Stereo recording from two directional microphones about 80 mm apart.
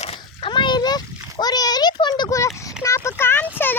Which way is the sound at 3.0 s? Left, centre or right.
Left.